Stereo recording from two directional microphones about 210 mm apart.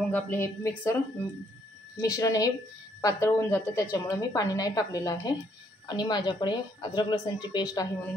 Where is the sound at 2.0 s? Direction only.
15° left (ahead or behind).